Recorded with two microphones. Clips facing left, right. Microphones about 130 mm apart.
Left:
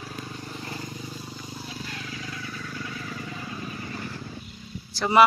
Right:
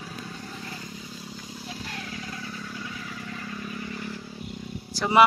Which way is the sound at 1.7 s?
70° right (ahead or behind).